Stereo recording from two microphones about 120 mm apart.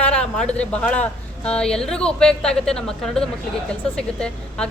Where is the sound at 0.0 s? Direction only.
10° left (ahead or behind).